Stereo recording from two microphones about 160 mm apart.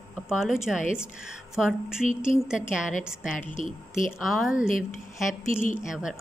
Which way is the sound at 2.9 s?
55° left (ahead or behind).